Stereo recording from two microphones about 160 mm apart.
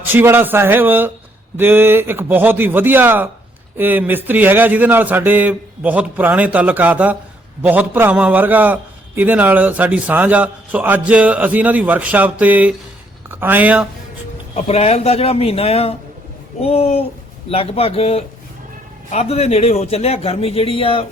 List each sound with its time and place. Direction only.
0.0 s a man's voice: 10° right (ahead or behind)
14.5 s a man's voice: 40° left (ahead or behind)